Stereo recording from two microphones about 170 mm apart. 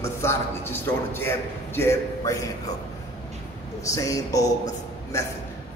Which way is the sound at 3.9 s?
20° left (ahead or behind).